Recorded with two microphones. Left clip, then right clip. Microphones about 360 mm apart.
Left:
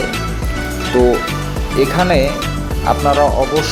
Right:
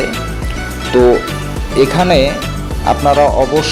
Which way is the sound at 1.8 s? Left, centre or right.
Left.